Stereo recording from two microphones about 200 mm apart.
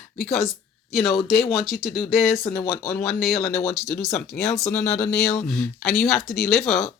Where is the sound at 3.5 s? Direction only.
35° left (ahead or behind).